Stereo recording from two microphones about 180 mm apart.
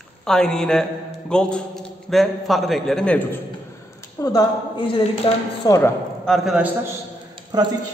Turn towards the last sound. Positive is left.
turn(degrees=-25)  # may be behind; listen again after turning